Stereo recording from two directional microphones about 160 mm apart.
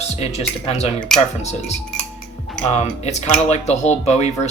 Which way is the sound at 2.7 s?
45° left (ahead or behind).